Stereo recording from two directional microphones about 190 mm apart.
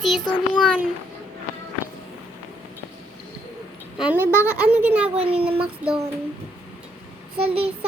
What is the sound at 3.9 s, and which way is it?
A child's voice, 5° right (ahead or behind).